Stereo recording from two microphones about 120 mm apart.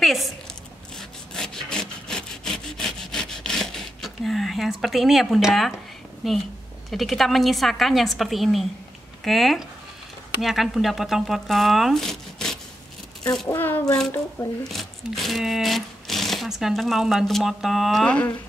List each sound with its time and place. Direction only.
0.0 s a sound: centre (ahead or behind)
0.9 s sawing: 5° left (ahead or behind)
6.2 s speech: centre (ahead or behind)
13.5 s a child's voice: 15° left (ahead or behind)
14.7 s speech: centre (ahead or behind)
18.0 s a child's voice: 10° left (ahead or behind)